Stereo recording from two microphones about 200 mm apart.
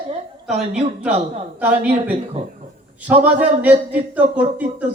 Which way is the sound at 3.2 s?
5° right (ahead or behind).